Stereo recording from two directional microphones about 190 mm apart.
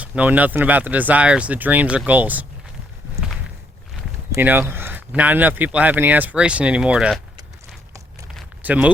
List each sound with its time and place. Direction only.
0.0 s speech: 10° right (ahead or behind)
4.3 s speech: 10° right (ahead or behind)
8.6 s speech: 5° right (ahead or behind)